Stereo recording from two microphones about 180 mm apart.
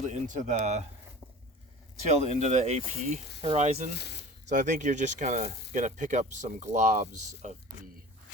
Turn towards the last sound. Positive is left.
turn(degrees=-45)  # may be behind; listen again after turning